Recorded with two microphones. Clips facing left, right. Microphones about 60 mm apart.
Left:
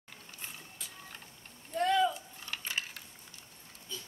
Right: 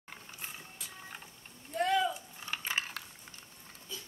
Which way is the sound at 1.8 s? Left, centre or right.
Centre.